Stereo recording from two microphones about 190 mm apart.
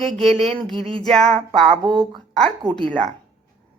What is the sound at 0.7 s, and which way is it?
Speech, 30° right (ahead or behind).